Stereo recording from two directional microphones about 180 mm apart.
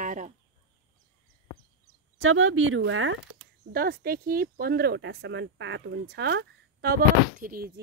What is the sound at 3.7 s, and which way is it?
Speech, 55° right (ahead or behind).